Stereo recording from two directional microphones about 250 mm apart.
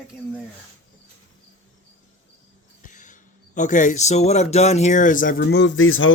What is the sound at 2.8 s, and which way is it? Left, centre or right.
Speech, left.